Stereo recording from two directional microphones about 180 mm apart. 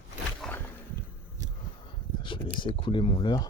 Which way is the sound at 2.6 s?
25° left (ahead or behind).